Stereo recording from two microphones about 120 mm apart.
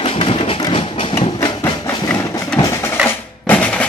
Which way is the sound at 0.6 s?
45° left (ahead or behind).